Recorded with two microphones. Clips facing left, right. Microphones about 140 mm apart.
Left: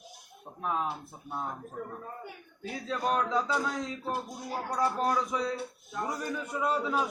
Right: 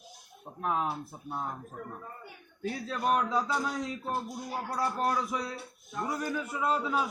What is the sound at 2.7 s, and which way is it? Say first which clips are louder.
A man's voice: even; centre (ahead or behind).